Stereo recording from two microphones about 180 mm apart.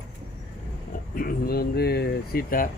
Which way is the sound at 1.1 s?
55° left (ahead or behind).